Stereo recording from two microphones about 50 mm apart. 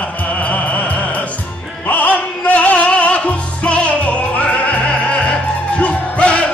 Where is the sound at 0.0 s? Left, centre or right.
Left.